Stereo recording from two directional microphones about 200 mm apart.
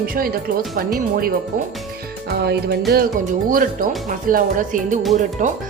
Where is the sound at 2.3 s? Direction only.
55° right (ahead or behind).